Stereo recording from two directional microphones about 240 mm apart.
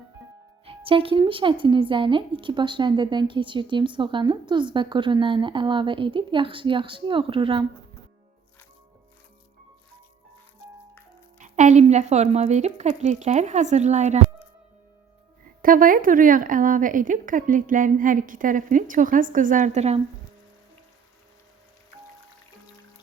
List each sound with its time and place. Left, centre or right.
0.6 s speech: right
11.3 s speech: right
15.6 s speech: right